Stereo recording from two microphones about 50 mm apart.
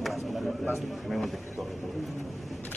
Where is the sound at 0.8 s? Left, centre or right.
Centre.